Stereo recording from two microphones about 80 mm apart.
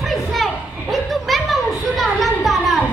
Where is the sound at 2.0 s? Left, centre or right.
Centre.